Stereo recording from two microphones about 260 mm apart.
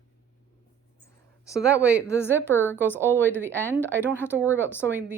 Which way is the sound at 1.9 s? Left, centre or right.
Centre.